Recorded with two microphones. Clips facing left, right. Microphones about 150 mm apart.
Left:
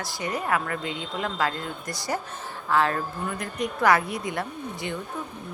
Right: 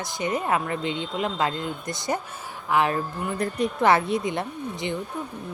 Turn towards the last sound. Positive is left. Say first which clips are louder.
# right 3 dB
turn(degrees=-20)  # may be behind; listen again after turning